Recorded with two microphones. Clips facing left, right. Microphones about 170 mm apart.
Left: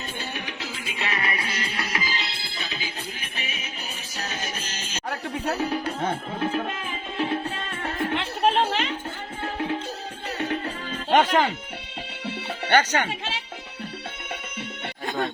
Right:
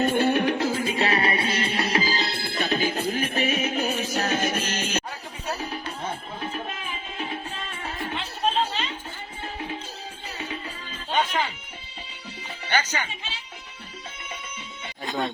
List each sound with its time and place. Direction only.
0.0 s music: 55° right (ahead or behind)
7.8 s music: 75° left (ahead or behind)
11.1 s music: 85° left
12.2 s music: 65° left (ahead or behind)